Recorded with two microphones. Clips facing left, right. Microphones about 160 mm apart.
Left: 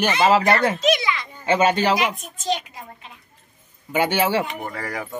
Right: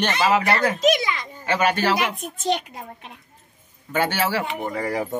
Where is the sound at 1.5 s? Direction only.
20° left (ahead or behind).